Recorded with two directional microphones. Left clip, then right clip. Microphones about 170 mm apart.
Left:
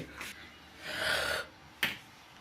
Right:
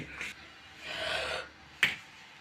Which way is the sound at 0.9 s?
65° left (ahead or behind).